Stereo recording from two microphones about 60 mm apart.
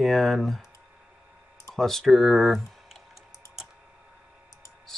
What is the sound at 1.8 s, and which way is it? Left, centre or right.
Speech, centre.